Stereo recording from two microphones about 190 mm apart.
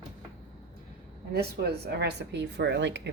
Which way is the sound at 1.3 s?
55° right (ahead or behind).